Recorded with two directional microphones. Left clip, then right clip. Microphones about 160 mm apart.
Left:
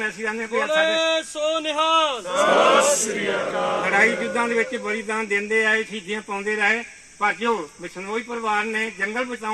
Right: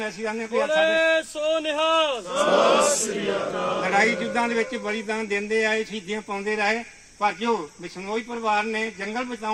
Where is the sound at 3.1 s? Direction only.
25° left (ahead or behind).